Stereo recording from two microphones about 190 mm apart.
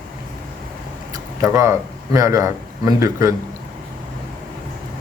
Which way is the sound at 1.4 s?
15° right (ahead or behind).